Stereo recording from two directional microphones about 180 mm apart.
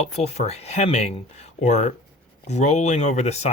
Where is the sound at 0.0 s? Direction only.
35° left (ahead or behind).